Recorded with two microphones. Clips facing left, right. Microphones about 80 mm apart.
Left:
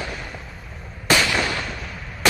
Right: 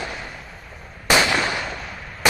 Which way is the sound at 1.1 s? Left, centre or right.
Right.